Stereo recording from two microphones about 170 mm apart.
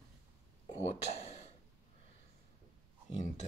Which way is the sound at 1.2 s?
40° left (ahead or behind).